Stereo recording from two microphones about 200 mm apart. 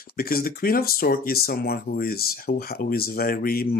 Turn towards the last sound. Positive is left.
turn(degrees=50)  # may be behind; listen again after turning